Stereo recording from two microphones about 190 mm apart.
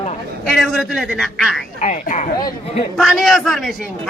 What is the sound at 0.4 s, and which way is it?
A man's voice, centre (ahead or behind).